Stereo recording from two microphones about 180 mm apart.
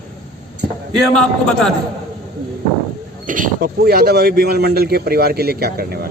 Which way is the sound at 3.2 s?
50° right (ahead or behind).